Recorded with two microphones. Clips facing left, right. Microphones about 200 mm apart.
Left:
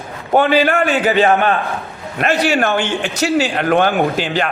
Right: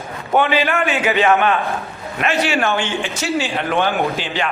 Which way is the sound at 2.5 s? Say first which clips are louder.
Left 3 dB; 55° left (ahead or behind).